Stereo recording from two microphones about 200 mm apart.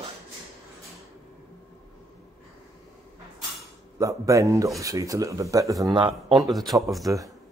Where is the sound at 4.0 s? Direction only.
15° right (ahead or behind).